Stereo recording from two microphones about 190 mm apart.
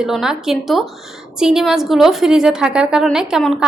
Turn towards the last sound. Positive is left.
turn(degrees=0)  # may be behind; listen again after turning